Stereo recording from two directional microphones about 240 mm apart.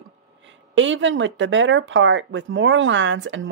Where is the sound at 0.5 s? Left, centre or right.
Right.